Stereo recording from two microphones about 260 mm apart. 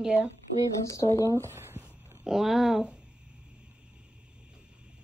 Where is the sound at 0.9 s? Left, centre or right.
Centre.